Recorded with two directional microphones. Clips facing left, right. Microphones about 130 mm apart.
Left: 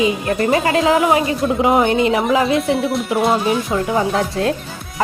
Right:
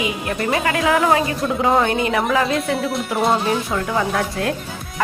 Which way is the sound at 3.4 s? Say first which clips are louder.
Left 3 dB; 15° left (ahead or behind).